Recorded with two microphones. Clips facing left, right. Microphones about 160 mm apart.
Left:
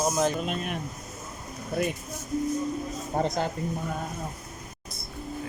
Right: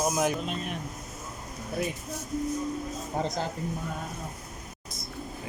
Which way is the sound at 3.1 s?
55° left (ahead or behind).